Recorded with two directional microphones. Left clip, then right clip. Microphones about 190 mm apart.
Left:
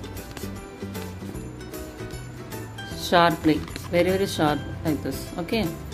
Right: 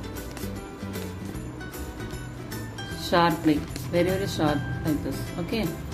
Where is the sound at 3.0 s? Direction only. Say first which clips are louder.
Left 3 dB; 40° left (ahead or behind).